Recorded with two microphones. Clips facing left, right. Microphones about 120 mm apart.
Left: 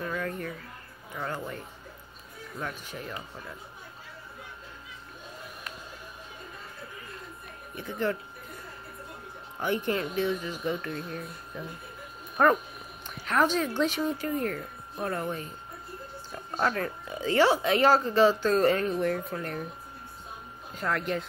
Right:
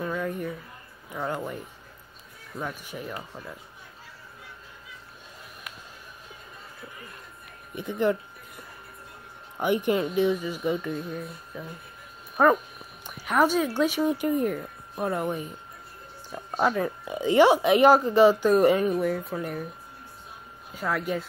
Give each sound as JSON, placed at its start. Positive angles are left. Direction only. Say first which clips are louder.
{"t": 0.0, "sound": "a sound", "louder": "right 3 dB", "side_deg": -10}
{"t": 1.1, "sound": "speech", "louder": "right 4 dB", "side_deg": -15}
{"t": 2.6, "sound": "speech", "louder": "right 3 dB", "side_deg": -10}
{"t": 7.7, "sound": "speech", "louder": "right 5 dB", "side_deg": -15}
{"t": 9.6, "sound": "speech", "louder": "right 5 dB", "side_deg": -15}
{"t": 20.7, "sound": "speech", "louder": "right 2 dB", "side_deg": -5}